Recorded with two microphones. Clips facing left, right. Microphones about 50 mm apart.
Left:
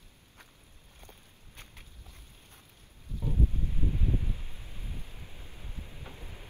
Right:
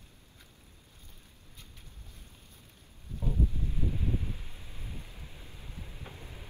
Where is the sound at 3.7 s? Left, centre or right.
Centre.